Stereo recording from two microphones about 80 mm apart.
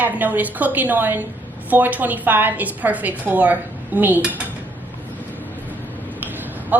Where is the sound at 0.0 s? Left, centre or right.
Right.